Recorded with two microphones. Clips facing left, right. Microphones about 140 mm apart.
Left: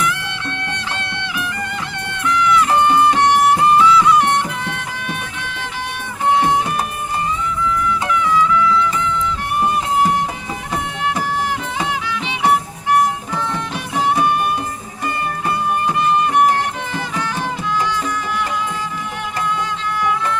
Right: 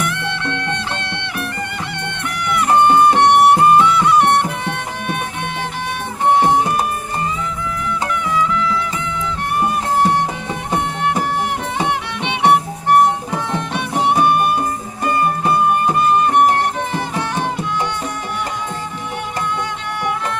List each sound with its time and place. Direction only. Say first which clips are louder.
0.0 s music: right 1 dB; 60° right (ahead or behind)
6.4 s music: right 2 dB; 45° right (ahead or behind)
11.8 s music: right 2 dB; 60° right (ahead or behind)
14.3 s music: right 3 dB; 50° right (ahead or behind)
20.0 s music: left 2 dB; 60° right (ahead or behind)